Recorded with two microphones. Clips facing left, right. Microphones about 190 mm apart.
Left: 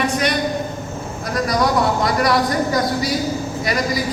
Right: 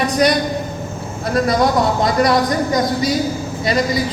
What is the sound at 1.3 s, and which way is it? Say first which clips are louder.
Speech: right 3 dB; 25° right (ahead or behind).